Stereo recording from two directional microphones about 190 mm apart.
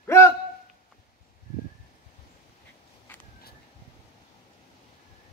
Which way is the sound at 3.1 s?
10° left (ahead or behind).